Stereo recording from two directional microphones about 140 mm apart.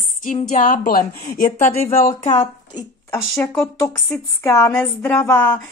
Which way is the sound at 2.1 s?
40° left (ahead or behind).